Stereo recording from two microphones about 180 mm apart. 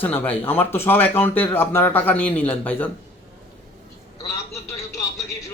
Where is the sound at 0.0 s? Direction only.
10° left (ahead or behind).